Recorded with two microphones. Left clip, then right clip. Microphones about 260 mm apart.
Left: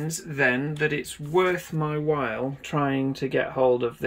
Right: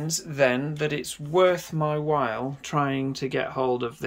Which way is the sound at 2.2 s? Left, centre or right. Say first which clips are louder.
Right 1 dB; right.